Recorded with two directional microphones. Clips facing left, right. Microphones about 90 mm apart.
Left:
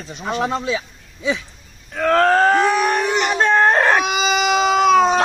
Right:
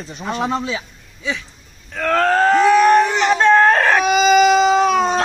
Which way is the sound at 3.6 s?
20° left (ahead or behind).